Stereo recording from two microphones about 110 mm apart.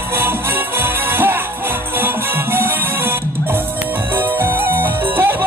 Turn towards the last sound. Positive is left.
turn(degrees=-20)  # may be behind; listen again after turning